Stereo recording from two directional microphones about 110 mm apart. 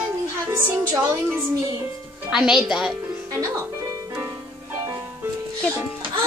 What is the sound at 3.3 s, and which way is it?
Music, 30° right (ahead or behind).